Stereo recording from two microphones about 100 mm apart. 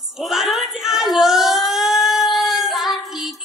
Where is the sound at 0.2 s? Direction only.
Centre (ahead or behind).